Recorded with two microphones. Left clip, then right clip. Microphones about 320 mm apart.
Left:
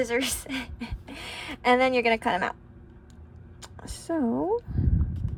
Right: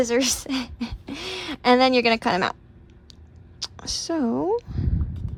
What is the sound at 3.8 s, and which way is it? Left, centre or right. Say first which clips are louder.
Speech: right 3 dB; left.